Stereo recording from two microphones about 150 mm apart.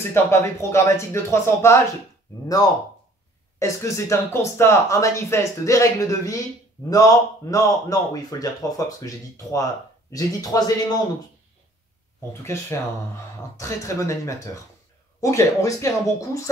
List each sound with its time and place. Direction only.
0.1 s speech: 15° left (ahead or behind)
3.5 s speech: 20° left (ahead or behind)
12.3 s speech: 20° left (ahead or behind)